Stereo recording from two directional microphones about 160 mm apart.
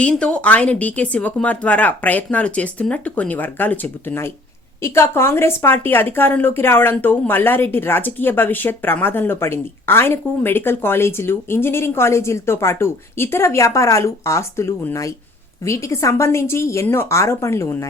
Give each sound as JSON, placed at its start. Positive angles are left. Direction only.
{"t": 0.0, "sound": "a woman's voice", "side_deg": 5}